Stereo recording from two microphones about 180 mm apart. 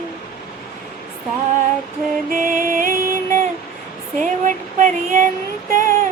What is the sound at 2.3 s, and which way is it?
Music, 50° right (ahead or behind).